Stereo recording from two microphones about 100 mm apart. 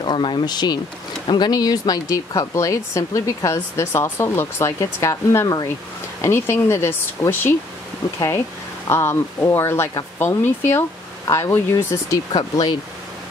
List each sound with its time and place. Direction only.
0.0 s speech: 50° left (ahead or behind); by 7.5 s 20° left (ahead or behind)
8.8 s speech: 25° left (ahead or behind)
11.2 s speech: 30° left (ahead or behind)
12.3 s speech: 40° left (ahead or behind)